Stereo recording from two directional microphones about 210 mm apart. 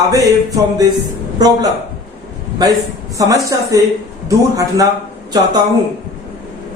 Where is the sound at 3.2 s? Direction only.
15° right (ahead or behind).